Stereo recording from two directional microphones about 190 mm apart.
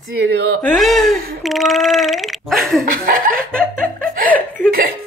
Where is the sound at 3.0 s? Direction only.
50° right (ahead or behind).